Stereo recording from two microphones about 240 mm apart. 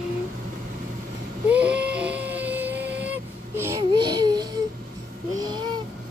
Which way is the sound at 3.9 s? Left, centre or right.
Right.